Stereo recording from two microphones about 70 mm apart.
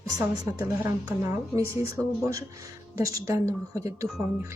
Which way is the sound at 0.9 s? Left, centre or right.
Right.